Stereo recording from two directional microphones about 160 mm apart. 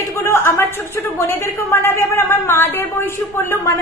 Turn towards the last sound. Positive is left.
turn(degrees=15)  # may be behind; listen again after turning